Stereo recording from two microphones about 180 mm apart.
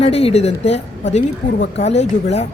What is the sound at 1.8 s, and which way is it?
Speech, 35° left (ahead or behind).